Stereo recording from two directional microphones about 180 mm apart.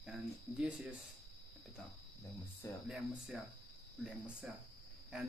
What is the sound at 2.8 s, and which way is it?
Speech, 5° right (ahead or behind).